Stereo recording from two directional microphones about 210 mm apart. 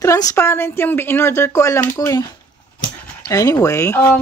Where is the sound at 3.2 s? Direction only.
20° left (ahead or behind).